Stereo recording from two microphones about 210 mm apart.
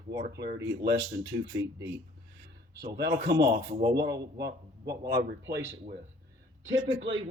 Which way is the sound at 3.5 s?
50° right (ahead or behind).